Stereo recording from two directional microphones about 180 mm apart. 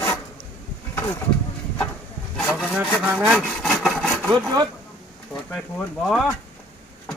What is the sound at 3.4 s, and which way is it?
Sawing, centre (ahead or behind).